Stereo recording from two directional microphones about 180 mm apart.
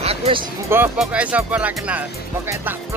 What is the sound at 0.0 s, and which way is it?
Music, 35° right (ahead or behind).